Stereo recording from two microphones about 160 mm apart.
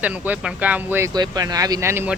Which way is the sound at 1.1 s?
25° right (ahead or behind).